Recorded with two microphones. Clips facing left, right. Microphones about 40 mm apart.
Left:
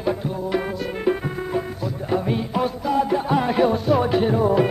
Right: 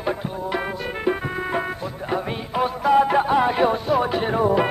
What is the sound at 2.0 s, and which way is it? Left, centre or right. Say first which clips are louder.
Music: left 3 dB; centre.